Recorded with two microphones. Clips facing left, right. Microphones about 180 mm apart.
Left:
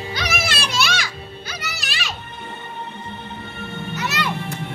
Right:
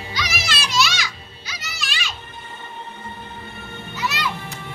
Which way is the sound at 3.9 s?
55° left (ahead or behind).